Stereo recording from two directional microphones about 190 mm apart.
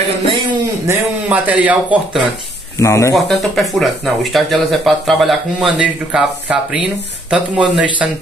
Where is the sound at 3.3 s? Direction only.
Centre (ahead or behind).